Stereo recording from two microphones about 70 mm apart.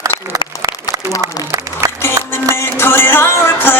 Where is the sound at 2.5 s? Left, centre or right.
Left.